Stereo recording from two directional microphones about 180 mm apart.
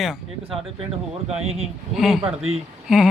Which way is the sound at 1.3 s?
35° right (ahead or behind).